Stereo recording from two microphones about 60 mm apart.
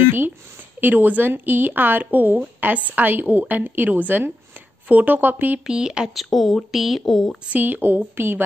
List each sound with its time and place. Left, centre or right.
0.0 s a sound: right
0.7 s speech: right
5.7 s speech: centre
6.1 s speech: centre
7.5 s speech: right